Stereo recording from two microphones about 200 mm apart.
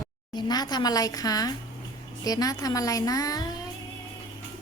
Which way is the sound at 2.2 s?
20° left (ahead or behind).